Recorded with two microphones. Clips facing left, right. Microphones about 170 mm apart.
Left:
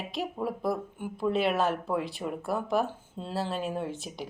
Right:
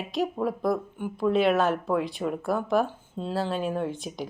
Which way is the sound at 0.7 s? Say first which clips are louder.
Right 4 dB; 55° right (ahead or behind).